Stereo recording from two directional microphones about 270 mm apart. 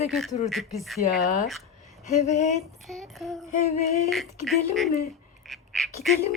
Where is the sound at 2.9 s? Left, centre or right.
Centre.